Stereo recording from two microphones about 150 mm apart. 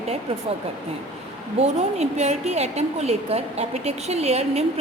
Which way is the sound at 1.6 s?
45° right (ahead or behind).